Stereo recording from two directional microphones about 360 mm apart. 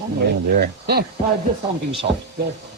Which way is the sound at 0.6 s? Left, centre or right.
Right.